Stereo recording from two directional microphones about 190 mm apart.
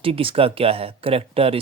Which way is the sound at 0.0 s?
30° right (ahead or behind).